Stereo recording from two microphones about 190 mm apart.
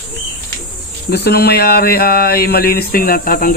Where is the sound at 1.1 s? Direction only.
60° left (ahead or behind).